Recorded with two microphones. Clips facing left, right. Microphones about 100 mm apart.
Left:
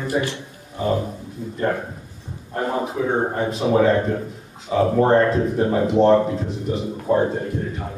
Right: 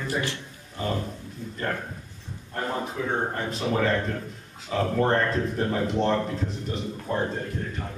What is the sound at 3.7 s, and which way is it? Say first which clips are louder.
A man's voice: left 8 dB; 10° left (ahead or behind).